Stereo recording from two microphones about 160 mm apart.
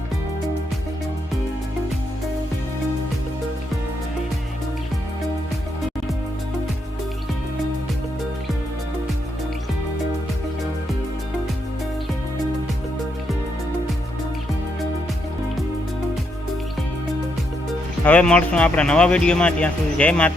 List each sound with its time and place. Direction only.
18.0 s speech: 10° left (ahead or behind)